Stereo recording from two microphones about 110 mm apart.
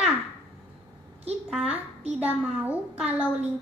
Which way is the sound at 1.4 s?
15° right (ahead or behind).